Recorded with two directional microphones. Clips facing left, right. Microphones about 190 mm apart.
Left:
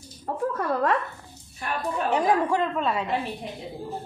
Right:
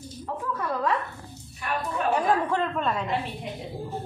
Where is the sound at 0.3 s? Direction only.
45° left (ahead or behind).